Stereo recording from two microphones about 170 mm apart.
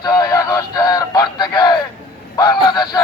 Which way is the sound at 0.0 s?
20° left (ahead or behind).